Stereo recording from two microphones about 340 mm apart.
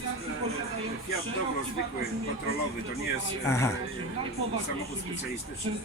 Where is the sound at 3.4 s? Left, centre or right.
Centre.